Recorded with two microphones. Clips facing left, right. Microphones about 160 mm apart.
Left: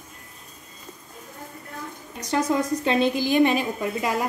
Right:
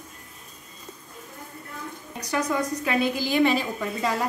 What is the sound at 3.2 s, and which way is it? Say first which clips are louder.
Speech: left 2 dB; 15° left (ahead or behind).